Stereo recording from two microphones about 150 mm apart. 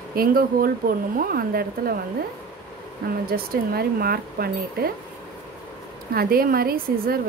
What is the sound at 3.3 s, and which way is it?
Speech, 80° right.